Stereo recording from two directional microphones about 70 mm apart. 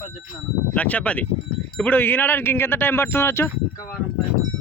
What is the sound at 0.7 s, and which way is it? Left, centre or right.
Speech, centre.